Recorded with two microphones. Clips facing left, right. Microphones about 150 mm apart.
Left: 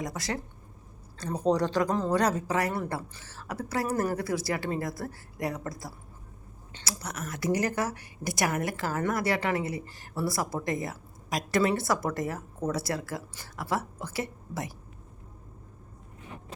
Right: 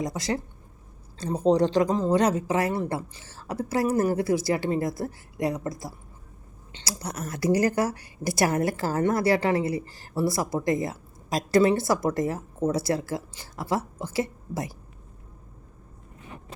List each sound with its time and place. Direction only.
0.0 s speech: 25° right (ahead or behind)
6.7 s a woman's voice: 30° right (ahead or behind)